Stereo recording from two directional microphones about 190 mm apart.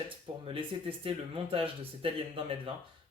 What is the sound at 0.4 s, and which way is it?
Speech, 30° right (ahead or behind).